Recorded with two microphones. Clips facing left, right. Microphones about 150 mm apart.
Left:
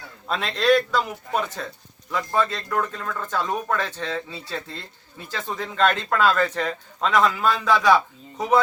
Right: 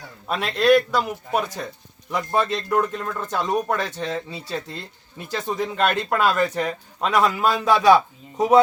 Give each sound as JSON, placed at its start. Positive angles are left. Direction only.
{"t": 0.3, "sound": "speech", "side_deg": -10}